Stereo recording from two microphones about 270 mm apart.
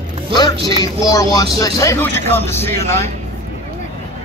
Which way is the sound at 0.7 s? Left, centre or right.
Centre.